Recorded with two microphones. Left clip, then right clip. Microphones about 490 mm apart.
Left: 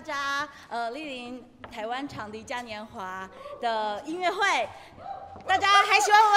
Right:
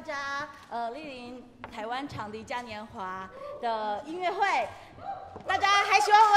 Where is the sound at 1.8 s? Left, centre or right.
Centre.